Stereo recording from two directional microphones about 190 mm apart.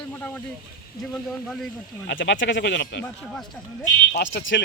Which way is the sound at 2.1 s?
70° left (ahead or behind).